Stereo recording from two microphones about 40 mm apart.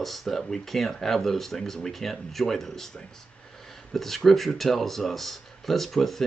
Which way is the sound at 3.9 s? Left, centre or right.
Centre.